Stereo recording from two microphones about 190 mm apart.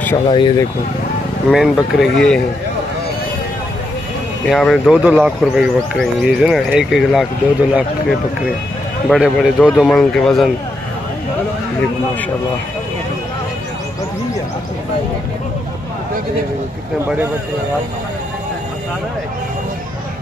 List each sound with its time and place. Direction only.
0.0 s speech: 15° left (ahead or behind)
0.4 s speech: 25° left (ahead or behind)
1.5 s speech: centre (ahead or behind)
4.5 s speech: centre (ahead or behind)
17.0 s speech: 10° right (ahead or behind)